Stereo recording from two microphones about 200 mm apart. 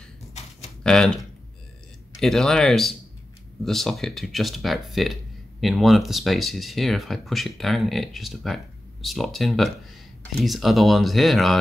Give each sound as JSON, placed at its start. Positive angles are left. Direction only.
{"t": 0.3, "sound": "a sound", "side_deg": 35}
{"t": 0.8, "sound": "speech", "side_deg": 5}
{"t": 2.1, "sound": "speech", "side_deg": 0}